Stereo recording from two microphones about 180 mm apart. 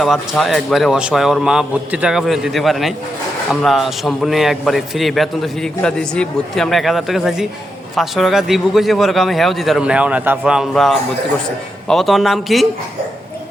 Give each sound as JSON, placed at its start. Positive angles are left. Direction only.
{"t": 0.0, "sound": "a man's voice", "side_deg": 0}